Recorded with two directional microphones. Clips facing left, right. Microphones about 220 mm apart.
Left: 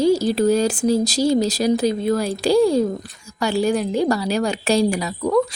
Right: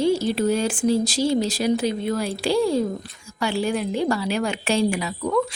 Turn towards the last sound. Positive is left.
turn(degrees=40)  # may be behind; listen again after turning